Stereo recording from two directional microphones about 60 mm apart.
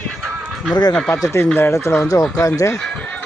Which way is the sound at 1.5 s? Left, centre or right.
Left.